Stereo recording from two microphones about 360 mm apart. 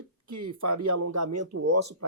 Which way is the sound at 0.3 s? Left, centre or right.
Right.